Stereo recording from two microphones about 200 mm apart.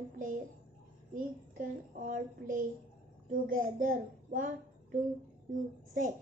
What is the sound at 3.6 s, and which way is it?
A child's voice, 40° right (ahead or behind).